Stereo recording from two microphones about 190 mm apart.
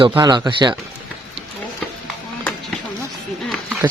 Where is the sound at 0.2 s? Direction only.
20° right (ahead or behind).